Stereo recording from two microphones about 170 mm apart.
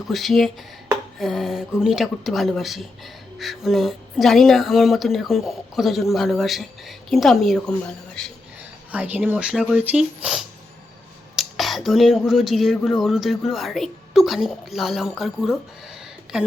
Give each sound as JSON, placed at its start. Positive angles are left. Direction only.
{"t": 0.1, "sound": "speech", "side_deg": 0}
{"t": 8.9, "sound": "speech", "side_deg": -10}